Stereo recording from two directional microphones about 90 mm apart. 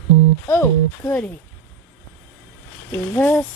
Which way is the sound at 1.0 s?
20° left (ahead or behind).